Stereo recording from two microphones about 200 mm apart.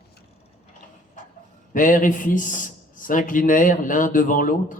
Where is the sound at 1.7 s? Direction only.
40° left (ahead or behind).